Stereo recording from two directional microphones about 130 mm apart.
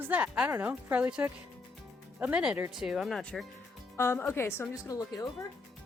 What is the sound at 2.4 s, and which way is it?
A woman's voice, 5° right (ahead or behind).